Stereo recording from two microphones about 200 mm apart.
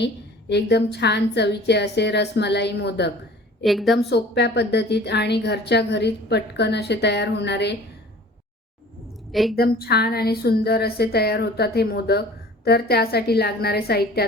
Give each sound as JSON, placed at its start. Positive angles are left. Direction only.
{"t": 0.0, "sound": "a woman's voice", "side_deg": 55}
{"t": 3.6, "sound": "a woman's voice", "side_deg": 0}
{"t": 4.1, "sound": "a woman's voice", "side_deg": 60}
{"t": 9.3, "sound": "a woman's voice", "side_deg": 0}
{"t": 9.6, "sound": "a woman's voice", "side_deg": 50}